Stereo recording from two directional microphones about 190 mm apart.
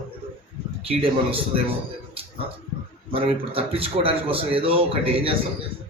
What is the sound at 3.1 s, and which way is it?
Speech, 30° right (ahead or behind).